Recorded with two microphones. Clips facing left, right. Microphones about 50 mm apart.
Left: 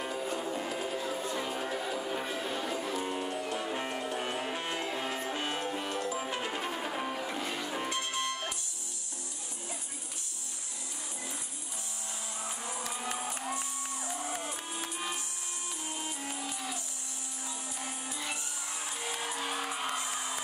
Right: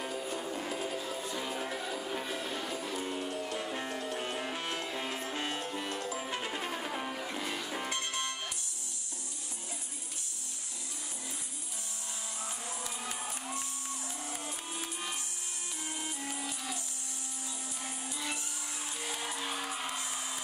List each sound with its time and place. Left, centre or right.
0.0 s music: left
0.5 s music: centre
14.4 s music: centre
16.0 s music: centre
17.8 s music: centre
19.4 s music: centre
19.8 s music: left